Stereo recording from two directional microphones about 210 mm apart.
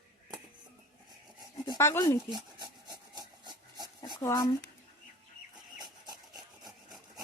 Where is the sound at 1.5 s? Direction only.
20° left (ahead or behind).